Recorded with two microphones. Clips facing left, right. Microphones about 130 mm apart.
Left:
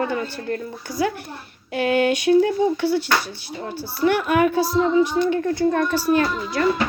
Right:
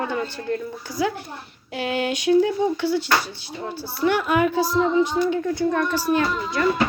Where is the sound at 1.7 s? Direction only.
55° left (ahead or behind).